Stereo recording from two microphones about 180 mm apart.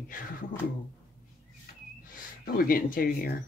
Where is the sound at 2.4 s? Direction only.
55° left (ahead or behind).